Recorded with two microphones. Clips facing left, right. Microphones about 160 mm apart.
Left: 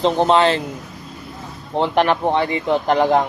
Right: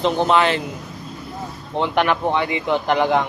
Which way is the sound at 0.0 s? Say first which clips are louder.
Left 2 dB; 30° left (ahead or behind).